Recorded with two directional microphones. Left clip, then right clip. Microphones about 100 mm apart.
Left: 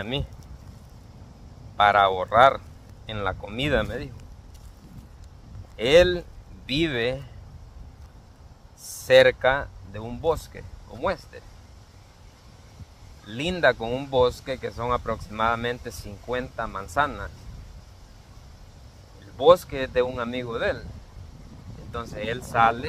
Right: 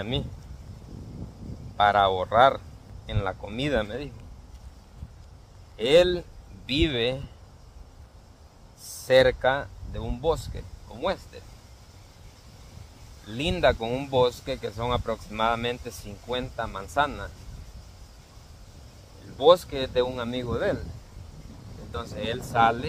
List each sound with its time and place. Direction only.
1.8 s speech: 20° right (ahead or behind)
5.8 s speech: 15° right (ahead or behind)
9.0 s speech: 15° right (ahead or behind)
13.3 s speech: 20° right (ahead or behind)
19.3 s speech: 20° right (ahead or behind)
21.9 s speech: 25° right (ahead or behind)